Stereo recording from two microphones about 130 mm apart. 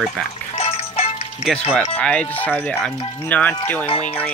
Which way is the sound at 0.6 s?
50° left (ahead or behind).